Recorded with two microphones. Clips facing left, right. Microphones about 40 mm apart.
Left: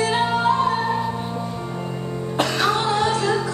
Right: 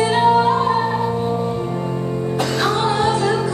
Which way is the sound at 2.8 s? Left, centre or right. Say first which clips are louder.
Right 3 dB; centre.